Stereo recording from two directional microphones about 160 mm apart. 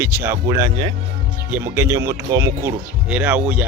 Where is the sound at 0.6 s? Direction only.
30° right (ahead or behind).